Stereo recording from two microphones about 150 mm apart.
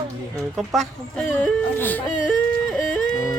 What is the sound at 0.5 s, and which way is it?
Speech, centre (ahead or behind).